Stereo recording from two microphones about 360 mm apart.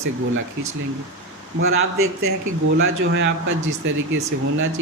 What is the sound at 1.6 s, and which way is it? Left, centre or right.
Speech, right.